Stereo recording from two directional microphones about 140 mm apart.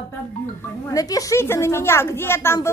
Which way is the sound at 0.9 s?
25° left (ahead or behind).